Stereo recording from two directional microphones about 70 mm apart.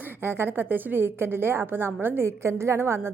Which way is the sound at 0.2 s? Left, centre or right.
Right.